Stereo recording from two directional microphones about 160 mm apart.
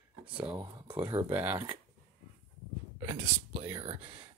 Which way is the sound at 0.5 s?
30° right (ahead or behind).